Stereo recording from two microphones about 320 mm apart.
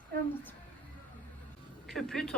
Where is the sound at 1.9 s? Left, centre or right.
Centre.